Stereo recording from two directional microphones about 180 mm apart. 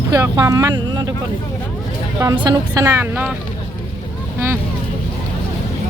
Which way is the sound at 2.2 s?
20° right (ahead or behind).